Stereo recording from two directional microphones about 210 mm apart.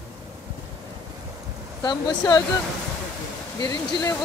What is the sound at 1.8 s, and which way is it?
Speech, 20° left (ahead or behind).